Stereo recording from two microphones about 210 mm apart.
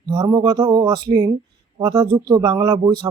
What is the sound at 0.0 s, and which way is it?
Speech, 20° right (ahead or behind).